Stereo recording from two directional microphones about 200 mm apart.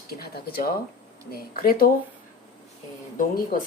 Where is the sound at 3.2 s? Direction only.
45° left (ahead or behind).